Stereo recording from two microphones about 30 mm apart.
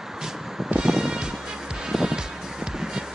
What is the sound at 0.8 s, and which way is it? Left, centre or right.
Music, right.